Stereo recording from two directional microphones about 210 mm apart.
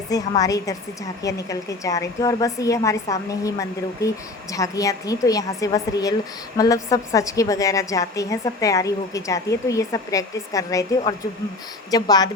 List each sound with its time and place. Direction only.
0.1 s a woman's voice: 15° left (ahead or behind)